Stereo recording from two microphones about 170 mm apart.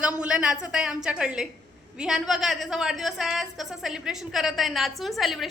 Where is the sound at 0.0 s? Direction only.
5° right (ahead or behind).